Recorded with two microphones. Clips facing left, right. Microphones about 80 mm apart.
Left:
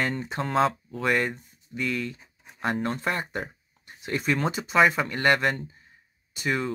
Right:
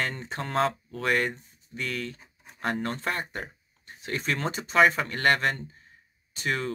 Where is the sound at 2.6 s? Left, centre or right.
Left.